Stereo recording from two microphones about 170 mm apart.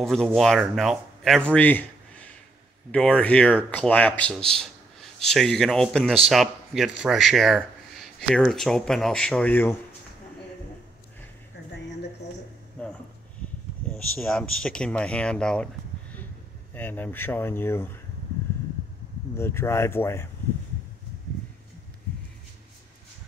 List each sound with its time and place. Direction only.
0.0 s speech: centre (ahead or behind)
12.8 s a sound: 5° left (ahead or behind)
14.2 s speech: 5° left (ahead or behind)
19.3 s speech: 15° left (ahead or behind)